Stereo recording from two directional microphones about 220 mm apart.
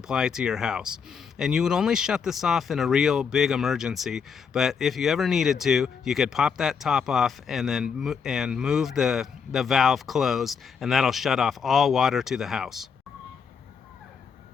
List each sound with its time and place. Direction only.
0.1 s speech: 5° right (ahead or behind)